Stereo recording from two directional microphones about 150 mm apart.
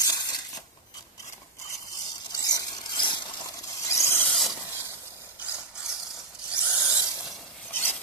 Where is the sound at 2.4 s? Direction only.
25° left (ahead or behind).